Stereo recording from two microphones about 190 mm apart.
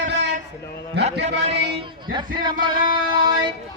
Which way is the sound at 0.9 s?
60° right (ahead or behind).